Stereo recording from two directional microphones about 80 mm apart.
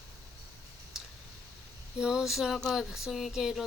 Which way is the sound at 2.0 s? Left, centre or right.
Centre.